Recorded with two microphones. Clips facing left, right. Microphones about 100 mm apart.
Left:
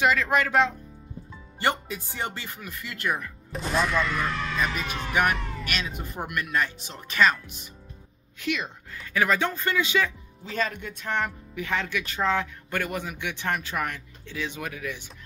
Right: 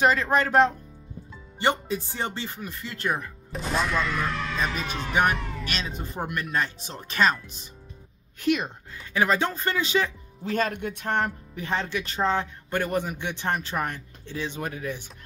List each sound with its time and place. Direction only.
0.0 s speech: 35° right (ahead or behind)
1.6 s speech: 25° right (ahead or behind)
3.5 s speech: centre (ahead or behind)
5.7 s speech: 30° right (ahead or behind)
8.4 s a woman's voice: 45° right (ahead or behind)
8.9 s speech: 25° right (ahead or behind)
10.5 s speech: 50° right (ahead or behind); by 15.0 s 35° right (ahead or behind)